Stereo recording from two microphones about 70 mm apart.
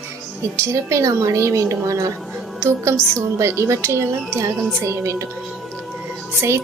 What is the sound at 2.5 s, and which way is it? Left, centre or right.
A woman's voice, right.